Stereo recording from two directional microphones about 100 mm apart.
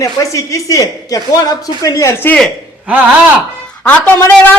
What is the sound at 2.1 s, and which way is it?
Speech, 20° left (ahead or behind).